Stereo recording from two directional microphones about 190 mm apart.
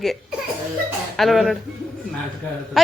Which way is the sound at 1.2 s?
Centre (ahead or behind).